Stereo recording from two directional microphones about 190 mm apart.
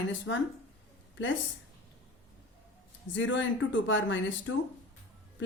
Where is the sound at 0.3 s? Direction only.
80° left.